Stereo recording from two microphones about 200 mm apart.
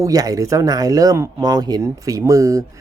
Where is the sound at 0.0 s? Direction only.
15° right (ahead or behind).